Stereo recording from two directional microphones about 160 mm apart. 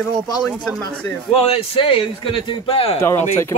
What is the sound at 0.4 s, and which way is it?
Speech, centre (ahead or behind).